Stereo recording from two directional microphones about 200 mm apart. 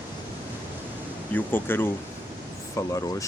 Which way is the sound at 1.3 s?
10° left (ahead or behind).